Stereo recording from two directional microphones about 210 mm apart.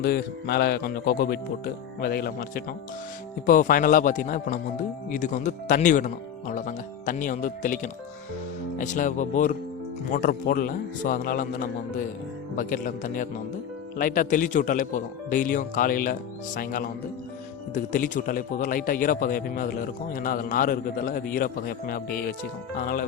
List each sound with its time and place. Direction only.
0.0 s a man's voice: 50° left (ahead or behind)
17.9 s a man's voice: 40° left (ahead or behind)